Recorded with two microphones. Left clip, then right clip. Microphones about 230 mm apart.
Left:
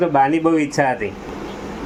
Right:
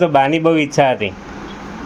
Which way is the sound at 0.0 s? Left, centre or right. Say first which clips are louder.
Right 3 dB; right.